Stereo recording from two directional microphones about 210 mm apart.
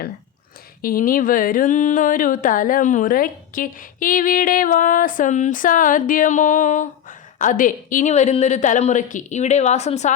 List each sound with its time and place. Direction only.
0.8 s speech: 45° left (ahead or behind)